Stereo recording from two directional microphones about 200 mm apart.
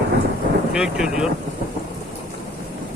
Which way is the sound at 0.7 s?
5° right (ahead or behind).